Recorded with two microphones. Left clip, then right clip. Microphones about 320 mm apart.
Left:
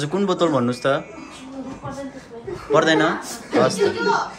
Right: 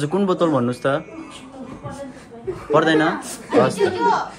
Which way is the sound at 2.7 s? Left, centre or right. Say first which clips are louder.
Even; centre.